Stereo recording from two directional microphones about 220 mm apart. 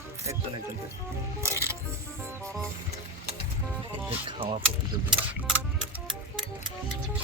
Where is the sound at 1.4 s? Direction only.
10° right (ahead or behind).